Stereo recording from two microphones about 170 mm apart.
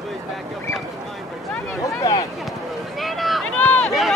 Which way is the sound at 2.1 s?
20° left (ahead or behind).